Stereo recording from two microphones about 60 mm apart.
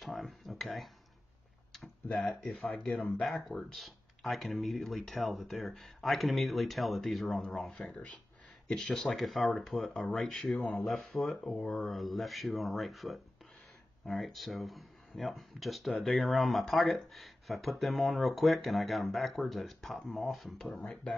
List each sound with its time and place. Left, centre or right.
0.0 s a sound: centre
2.0 s speech: centre
2.5 s speech: centre
2.8 s speech: centre
3.3 s speech: centre
20.8 s speech: left